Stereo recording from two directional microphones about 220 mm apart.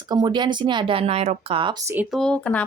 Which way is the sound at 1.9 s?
Centre (ahead or behind).